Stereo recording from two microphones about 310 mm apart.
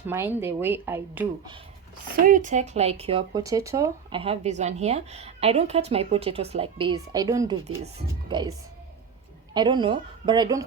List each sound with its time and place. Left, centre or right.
0.0 s a woman's voice: centre
2.2 s a woman's voice: right
9.6 s a woman's voice: centre